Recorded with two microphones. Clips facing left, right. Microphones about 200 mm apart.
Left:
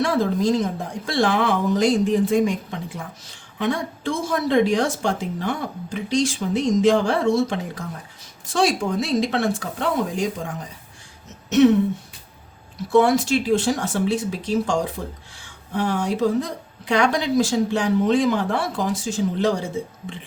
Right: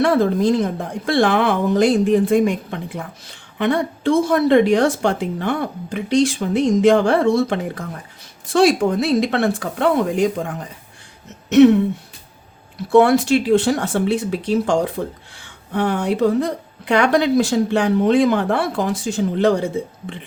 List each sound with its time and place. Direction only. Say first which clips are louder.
0.0 s speech: right 4 dB; 60° right (ahead or behind)
11.4 s throat clearing: right 5 dB; 65° right (ahead or behind)
12.7 s speech: right 4 dB; 60° right (ahead or behind)